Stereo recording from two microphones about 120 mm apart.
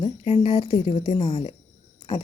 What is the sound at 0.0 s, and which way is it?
Speech, 50° left (ahead or behind).